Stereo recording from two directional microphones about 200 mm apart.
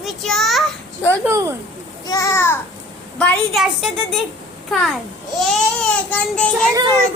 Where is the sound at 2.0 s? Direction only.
15° left (ahead or behind).